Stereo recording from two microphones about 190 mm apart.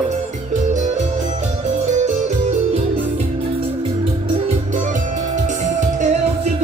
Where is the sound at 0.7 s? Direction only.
40° right (ahead or behind).